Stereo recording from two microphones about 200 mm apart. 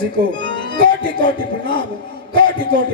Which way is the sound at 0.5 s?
25° left (ahead or behind).